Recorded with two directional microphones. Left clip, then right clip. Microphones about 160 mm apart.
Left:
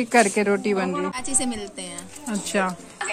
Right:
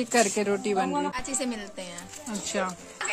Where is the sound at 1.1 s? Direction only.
65° right (ahead or behind).